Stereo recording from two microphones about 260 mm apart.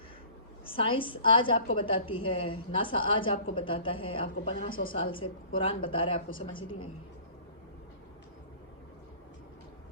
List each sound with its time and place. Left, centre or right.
0.6 s a woman's voice: centre
4.7 s a woman's voice: left
4.9 s a woman's voice: centre